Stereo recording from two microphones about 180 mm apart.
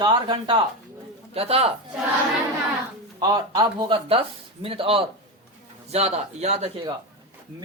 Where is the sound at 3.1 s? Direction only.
20° right (ahead or behind).